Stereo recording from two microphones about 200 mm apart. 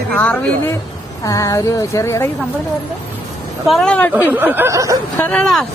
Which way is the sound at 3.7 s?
5° left (ahead or behind).